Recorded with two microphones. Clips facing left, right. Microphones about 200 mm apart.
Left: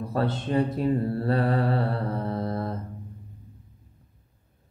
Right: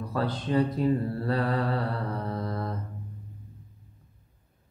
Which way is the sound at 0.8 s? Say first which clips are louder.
Left 2 dB; 30° left (ahead or behind).